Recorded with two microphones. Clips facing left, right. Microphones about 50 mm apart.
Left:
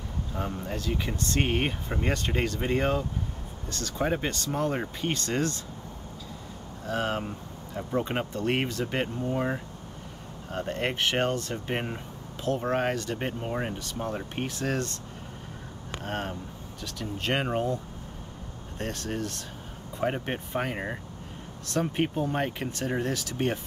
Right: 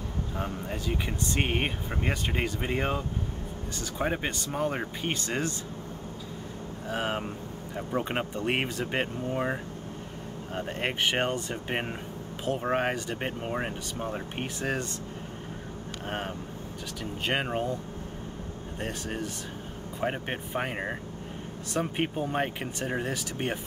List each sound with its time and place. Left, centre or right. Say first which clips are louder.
0.3 s speech: left 2 dB; centre
6.9 s speech: left 2 dB; centre
16.0 s speech: left 1 dB; centre
18.8 s speech: left 2 dB; centre